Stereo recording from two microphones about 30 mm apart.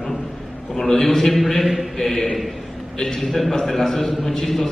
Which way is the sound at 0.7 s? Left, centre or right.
Centre.